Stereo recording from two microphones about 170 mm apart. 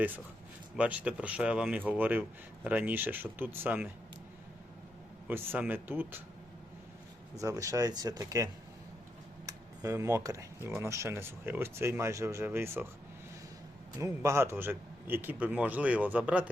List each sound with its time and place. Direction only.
0.8 s speech: 5° right (ahead or behind)
5.3 s speech: 10° right (ahead or behind)
7.4 s speech: 20° right (ahead or behind)
9.5 s speech: 20° right (ahead or behind)
14.0 s speech: 15° right (ahead or behind)